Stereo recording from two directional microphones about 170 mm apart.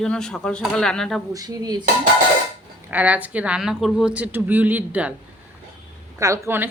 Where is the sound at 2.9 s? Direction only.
10° right (ahead or behind).